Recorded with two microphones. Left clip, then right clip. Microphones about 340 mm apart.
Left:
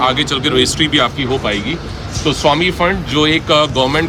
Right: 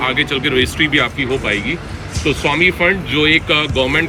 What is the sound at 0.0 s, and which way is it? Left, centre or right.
Speech, centre.